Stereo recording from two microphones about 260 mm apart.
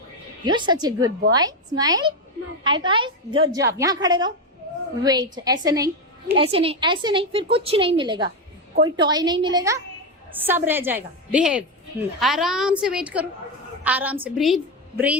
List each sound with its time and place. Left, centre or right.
0.4 s a woman's voice: centre